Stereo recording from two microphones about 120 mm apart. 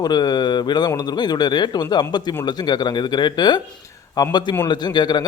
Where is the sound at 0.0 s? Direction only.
35° left (ahead or behind).